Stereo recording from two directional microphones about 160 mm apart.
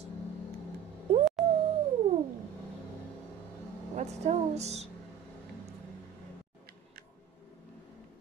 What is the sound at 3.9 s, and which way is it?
Speech, 45° right (ahead or behind).